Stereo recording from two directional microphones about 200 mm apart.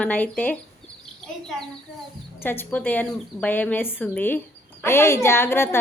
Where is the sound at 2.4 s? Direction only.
10° left (ahead or behind).